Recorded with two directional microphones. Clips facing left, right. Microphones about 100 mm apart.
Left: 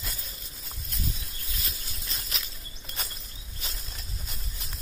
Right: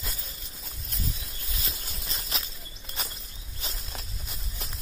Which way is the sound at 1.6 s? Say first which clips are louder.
Right 4 dB; 30° right (ahead or behind).